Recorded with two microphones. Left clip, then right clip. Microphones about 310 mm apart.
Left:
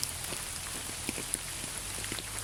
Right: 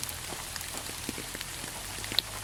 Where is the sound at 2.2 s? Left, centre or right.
Right.